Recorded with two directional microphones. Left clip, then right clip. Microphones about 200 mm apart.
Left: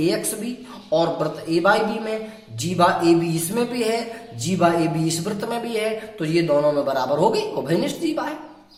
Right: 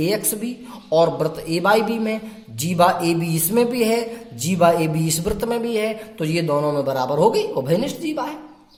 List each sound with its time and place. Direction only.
0.0 s speech: 35° right (ahead or behind)